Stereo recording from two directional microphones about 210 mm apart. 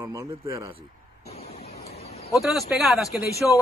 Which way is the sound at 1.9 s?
30° left (ahead or behind).